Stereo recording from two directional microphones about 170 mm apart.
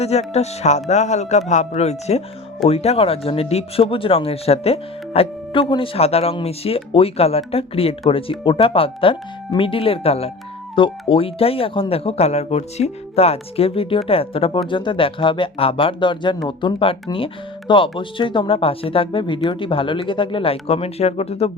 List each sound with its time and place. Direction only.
0.0 s speech: 40° left (ahead or behind)